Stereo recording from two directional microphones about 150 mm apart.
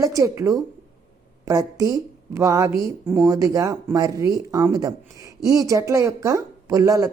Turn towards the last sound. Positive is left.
turn(degrees=-25)  # may be behind; listen again after turning